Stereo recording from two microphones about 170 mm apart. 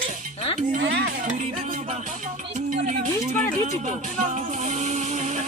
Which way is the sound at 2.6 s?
50° right (ahead or behind).